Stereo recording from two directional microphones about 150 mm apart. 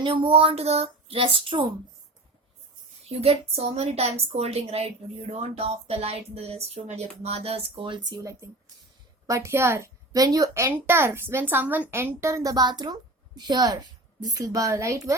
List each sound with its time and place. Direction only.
0.1 s speech: 40° right (ahead or behind)
3.1 s a woman's voice: 40° right (ahead or behind); by 15.1 s 20° right (ahead or behind)